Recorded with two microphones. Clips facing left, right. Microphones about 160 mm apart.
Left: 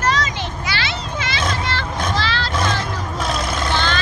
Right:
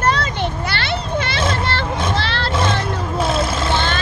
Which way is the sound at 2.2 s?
60° right (ahead or behind).